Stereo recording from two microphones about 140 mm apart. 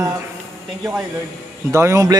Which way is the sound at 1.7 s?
20° right (ahead or behind).